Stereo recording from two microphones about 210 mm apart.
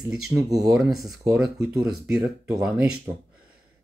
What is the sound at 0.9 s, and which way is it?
Speech, centre (ahead or behind).